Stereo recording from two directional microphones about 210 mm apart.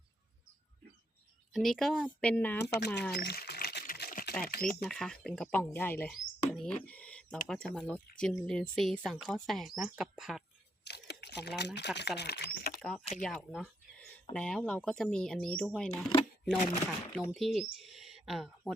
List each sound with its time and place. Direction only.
1.5 s speech: centre (ahead or behind)
2.7 s speech: 55° left (ahead or behind)
3.1 s a sound: 50° left (ahead or behind)
4.8 s speech: centre (ahead or behind)
10.8 s a sound: 55° left (ahead or behind)
11.9 s speech: 55° left (ahead or behind)
12.8 s speech: centre (ahead or behind)
13.2 s a sound: centre (ahead or behind)
14.3 s speech: 5° left (ahead or behind)
15.9 s speech: 20° left (ahead or behind)
16.8 s speech: 5° left (ahead or behind)